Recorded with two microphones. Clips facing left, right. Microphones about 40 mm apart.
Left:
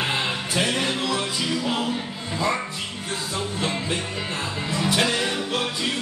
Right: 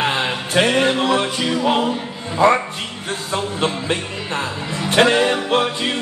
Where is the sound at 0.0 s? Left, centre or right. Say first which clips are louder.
Right 5 dB; right.